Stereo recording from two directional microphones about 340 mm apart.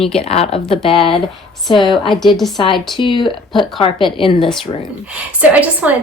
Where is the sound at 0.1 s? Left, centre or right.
Centre.